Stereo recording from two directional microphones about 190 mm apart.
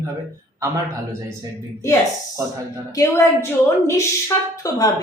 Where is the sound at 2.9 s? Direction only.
15° left (ahead or behind).